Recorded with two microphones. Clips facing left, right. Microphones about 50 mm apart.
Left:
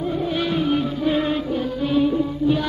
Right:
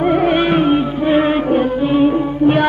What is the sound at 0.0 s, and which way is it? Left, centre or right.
Music, right.